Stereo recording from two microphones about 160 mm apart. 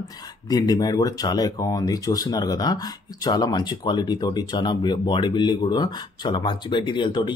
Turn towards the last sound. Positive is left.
turn(degrees=30)  # may be behind; listen again after turning